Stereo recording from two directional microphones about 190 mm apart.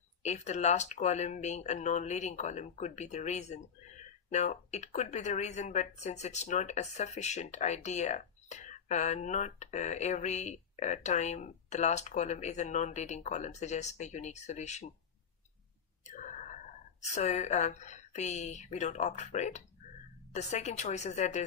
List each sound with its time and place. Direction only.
0.2 s speech: 35° left (ahead or behind)
16.1 s a sound: 40° left (ahead or behind)
17.0 s speech: 35° left (ahead or behind)